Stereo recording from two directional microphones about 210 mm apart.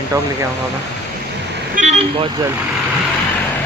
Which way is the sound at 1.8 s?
30° right (ahead or behind).